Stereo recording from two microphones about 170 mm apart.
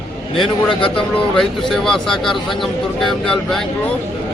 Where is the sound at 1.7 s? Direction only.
Centre (ahead or behind).